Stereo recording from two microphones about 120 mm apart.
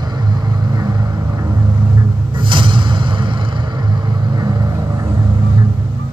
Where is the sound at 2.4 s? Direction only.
45° right (ahead or behind).